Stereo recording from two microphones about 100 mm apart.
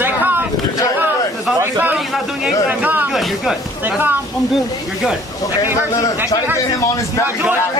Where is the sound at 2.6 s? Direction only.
15° right (ahead or behind).